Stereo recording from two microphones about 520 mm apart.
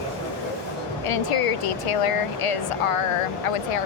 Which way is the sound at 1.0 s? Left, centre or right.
Left.